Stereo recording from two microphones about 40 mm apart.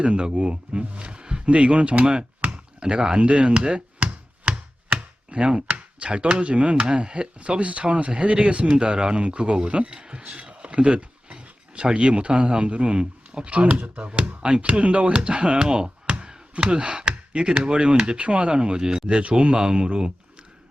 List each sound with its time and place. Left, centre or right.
0.0 s speech: right